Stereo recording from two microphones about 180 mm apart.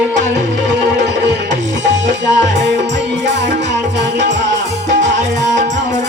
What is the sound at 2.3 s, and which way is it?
Music, 75° right (ahead or behind).